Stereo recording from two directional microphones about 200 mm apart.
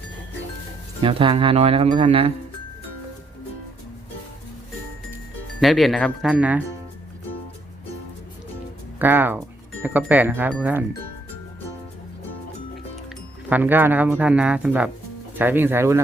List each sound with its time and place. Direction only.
1.0 s speech: 25° right (ahead or behind)
5.5 s speech: centre (ahead or behind)
9.0 s speech: 10° right (ahead or behind)
13.5 s speech: 10° right (ahead or behind)